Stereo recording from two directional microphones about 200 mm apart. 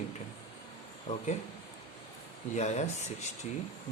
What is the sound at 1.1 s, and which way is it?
Speech, 35° left (ahead or behind).